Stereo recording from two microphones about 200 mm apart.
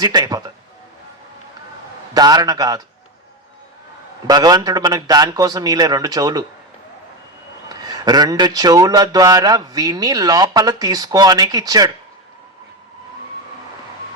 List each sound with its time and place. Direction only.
0.0 s speech: 20° right (ahead or behind)
2.1 s speech: 20° right (ahead or behind)
4.3 s speech: 20° right (ahead or behind)
7.7 s speech: 20° right (ahead or behind)